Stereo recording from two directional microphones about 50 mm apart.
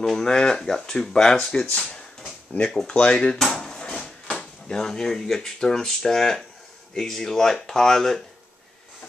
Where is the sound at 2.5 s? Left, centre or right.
Left.